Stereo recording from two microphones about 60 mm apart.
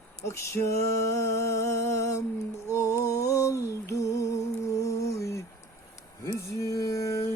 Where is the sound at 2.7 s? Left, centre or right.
Left.